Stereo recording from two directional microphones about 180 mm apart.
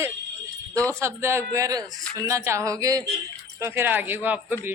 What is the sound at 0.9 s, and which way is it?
Speech, 15° right (ahead or behind).